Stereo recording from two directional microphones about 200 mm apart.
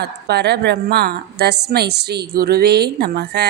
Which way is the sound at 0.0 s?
55° right (ahead or behind).